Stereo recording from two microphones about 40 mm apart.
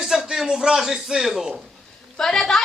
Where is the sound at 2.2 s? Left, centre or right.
Centre.